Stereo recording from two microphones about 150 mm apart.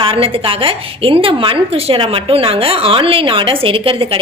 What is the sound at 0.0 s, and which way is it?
A woman's voice, 40° right (ahead or behind).